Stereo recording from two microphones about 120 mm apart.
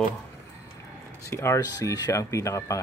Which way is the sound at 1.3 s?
25° left (ahead or behind).